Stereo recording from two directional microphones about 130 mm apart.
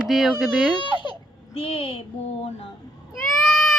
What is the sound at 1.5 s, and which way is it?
Speech, 50° left (ahead or behind).